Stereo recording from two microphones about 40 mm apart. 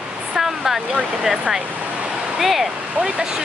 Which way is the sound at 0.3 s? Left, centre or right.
Centre.